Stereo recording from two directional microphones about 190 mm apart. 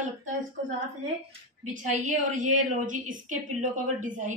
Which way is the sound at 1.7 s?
40° right (ahead or behind).